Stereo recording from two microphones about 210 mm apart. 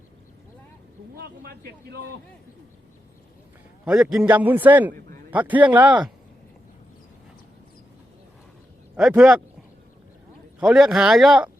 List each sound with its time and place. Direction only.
1.1 s speech: 50° right (ahead or behind)
3.8 s a man's voice: 5° right (ahead or behind)
9.0 s speech: 5° right (ahead or behind)
10.6 s speech: 5° right (ahead or behind)